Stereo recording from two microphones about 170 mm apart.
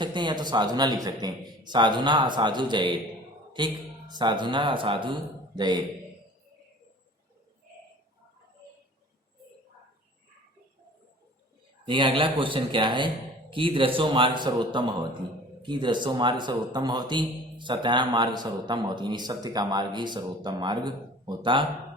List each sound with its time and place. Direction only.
0.0 s speech: 25° right (ahead or behind)
11.9 s speech: 30° right (ahead or behind)